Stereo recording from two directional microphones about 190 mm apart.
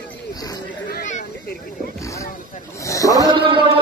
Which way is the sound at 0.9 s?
40° left (ahead or behind).